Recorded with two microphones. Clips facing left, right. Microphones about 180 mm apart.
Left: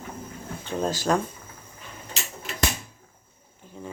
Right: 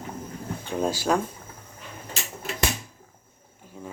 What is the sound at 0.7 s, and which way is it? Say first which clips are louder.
Speech: even; 10° right (ahead or behind).